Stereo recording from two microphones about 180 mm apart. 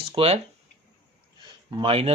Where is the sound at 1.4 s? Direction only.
25° right (ahead or behind).